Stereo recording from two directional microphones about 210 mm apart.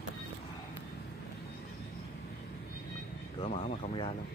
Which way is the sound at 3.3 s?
25° left (ahead or behind).